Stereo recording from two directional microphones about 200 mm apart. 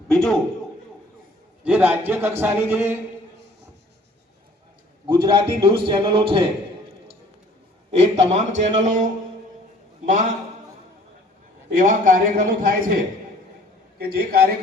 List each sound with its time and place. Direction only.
0.1 s a man's voice: 5° left (ahead or behind)
1.6 s a man's voice: 10° right (ahead or behind)
5.0 s a man's voice: 20° right (ahead or behind)
7.9 s a man's voice: 35° right (ahead or behind)
10.1 s a man's voice: 40° right (ahead or behind)
11.7 s a man's voice: 40° right (ahead or behind)
14.0 s a man's voice: 50° right (ahead or behind)